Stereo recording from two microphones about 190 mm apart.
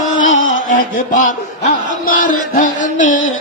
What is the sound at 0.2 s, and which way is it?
Music, 90° left.